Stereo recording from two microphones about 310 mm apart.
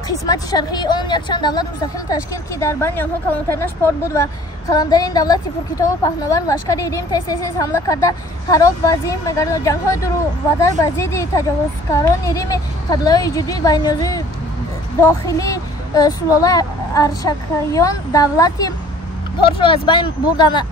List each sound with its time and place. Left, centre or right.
0.3 s speech: centre